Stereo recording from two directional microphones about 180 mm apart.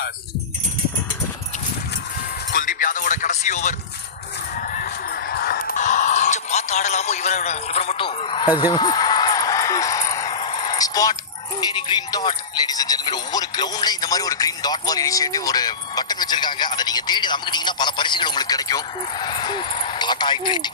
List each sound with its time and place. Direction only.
2.5 s music: 50° left (ahead or behind)
4.5 s honk: 50° left (ahead or behind); by 10.3 s 20° left (ahead or behind)
10.3 s a sound: 30° left (ahead or behind)
11.7 s speech: 25° left (ahead or behind)